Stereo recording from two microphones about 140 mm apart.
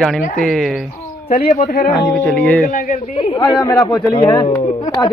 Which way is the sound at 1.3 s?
50° left (ahead or behind).